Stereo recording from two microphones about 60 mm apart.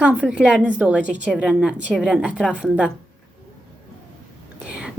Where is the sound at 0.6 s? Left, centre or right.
Right.